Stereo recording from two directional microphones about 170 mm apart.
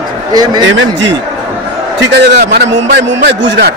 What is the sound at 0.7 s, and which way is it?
A man's voice, 90° right.